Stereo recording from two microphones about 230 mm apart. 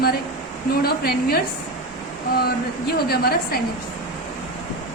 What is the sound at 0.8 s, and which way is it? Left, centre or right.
Speech, left.